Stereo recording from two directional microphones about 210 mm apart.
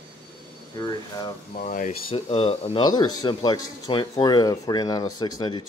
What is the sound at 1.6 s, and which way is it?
Speech, 35° left (ahead or behind).